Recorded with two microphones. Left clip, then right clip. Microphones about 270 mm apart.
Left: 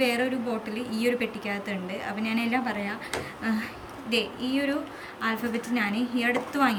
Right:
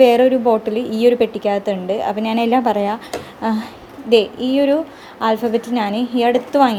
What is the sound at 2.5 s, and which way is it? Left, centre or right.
A woman's voice, centre.